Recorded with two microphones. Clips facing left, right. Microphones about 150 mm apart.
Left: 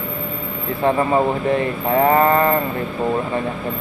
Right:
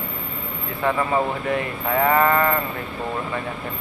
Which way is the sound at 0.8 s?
30° left (ahead or behind).